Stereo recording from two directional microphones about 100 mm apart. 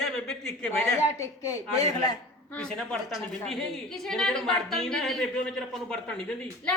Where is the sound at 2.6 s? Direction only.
5° left (ahead or behind).